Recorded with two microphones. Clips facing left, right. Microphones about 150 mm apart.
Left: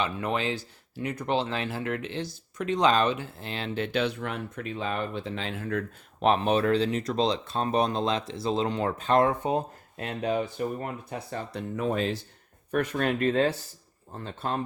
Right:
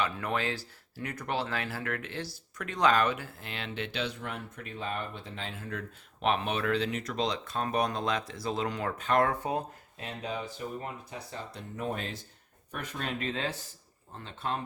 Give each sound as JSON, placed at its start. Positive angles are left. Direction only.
{"t": 0.0, "sound": "speech", "side_deg": 20}
{"t": 4.0, "sound": "speech", "side_deg": 90}
{"t": 6.2, "sound": "speech", "side_deg": 35}
{"t": 10.0, "sound": "speech", "side_deg": 65}
{"t": 12.7, "sound": "speech", "side_deg": 65}
{"t": 14.3, "sound": "speech", "side_deg": 40}